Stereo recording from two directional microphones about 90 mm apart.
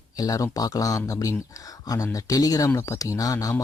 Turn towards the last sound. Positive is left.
turn(degrees=40)  # may be behind; listen again after turning